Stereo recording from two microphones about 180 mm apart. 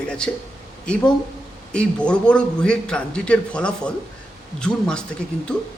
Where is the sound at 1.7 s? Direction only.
5° left (ahead or behind).